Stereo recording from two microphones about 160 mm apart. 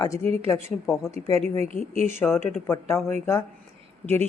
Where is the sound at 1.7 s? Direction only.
20° left (ahead or behind).